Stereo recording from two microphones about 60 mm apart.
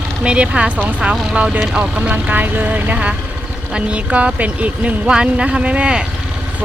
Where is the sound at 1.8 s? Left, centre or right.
Right.